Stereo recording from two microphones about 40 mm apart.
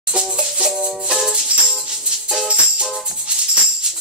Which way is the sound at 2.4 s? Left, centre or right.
Right.